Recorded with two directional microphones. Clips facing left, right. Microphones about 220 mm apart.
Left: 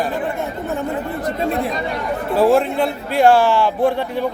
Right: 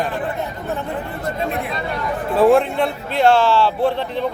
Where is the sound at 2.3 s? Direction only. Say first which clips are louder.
Right 1 dB; centre (ahead or behind).